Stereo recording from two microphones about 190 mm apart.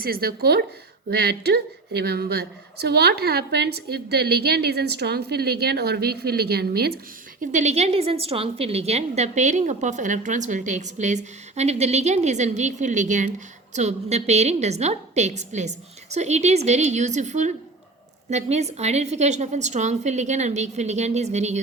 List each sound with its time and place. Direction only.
0.0 s a woman's voice: 50° right (ahead or behind)
7.5 s a woman's voice: 35° right (ahead or behind)